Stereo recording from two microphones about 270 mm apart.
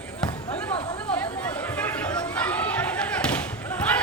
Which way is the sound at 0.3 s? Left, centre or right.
Centre.